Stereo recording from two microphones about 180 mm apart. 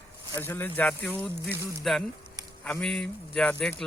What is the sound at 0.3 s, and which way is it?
Speech, 10° left (ahead or behind).